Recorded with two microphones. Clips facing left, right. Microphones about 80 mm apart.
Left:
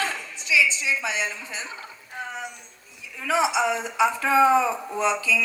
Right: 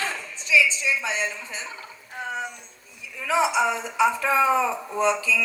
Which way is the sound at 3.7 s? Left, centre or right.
Left.